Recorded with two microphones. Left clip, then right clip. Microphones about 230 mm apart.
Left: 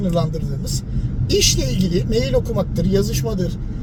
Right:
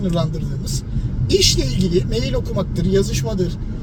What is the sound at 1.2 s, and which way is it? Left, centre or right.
Speech, centre.